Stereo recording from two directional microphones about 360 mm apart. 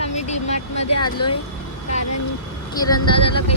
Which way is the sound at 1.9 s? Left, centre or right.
Left.